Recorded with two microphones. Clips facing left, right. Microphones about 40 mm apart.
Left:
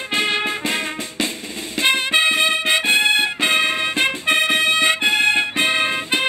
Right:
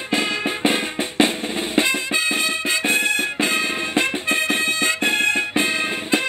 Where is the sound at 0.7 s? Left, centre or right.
Right.